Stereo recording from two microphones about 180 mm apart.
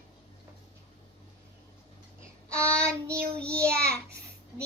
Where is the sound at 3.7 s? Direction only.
60° right (ahead or behind).